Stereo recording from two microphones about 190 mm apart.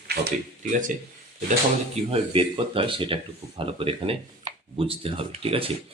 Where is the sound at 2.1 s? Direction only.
30° right (ahead or behind).